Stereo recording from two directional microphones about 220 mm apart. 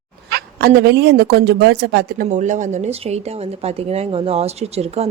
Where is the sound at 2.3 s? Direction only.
35° right (ahead or behind).